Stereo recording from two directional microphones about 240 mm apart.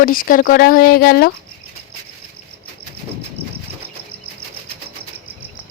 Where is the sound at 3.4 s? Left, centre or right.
Right.